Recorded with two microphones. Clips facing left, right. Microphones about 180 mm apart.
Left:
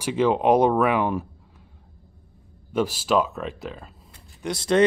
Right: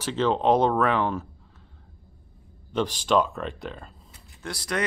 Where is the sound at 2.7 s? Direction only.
5° left (ahead or behind).